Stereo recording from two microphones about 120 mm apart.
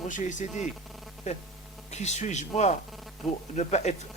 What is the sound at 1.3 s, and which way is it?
A man's voice, 70° left (ahead or behind).